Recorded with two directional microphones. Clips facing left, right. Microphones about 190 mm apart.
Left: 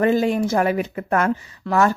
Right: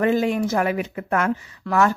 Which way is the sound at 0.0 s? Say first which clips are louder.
Left 2 dB; 35° left (ahead or behind).